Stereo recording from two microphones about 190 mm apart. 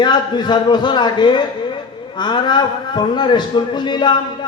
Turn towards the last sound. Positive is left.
turn(degrees=25)  # may be behind; listen again after turning